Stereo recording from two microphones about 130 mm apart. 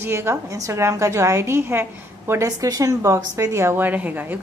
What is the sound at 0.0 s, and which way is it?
A woman's voice, 20° right (ahead or behind).